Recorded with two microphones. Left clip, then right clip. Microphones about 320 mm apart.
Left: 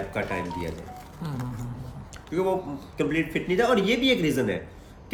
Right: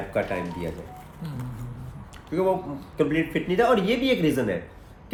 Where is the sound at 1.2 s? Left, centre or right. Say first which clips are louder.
Left 4 dB; centre.